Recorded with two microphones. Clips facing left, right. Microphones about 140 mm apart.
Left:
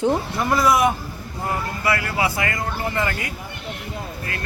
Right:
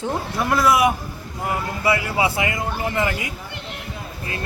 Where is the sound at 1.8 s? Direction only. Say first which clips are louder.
Right 3 dB; 20° right (ahead or behind).